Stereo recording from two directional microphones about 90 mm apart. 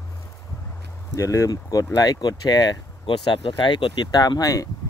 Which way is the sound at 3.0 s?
65° left (ahead or behind).